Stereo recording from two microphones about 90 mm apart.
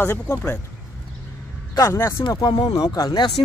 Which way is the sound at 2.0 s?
25° left (ahead or behind).